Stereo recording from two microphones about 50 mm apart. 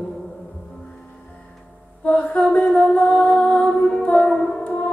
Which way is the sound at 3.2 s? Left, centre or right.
Left.